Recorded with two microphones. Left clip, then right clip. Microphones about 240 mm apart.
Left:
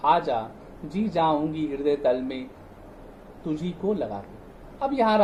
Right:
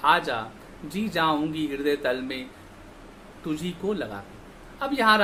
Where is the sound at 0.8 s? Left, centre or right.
Centre.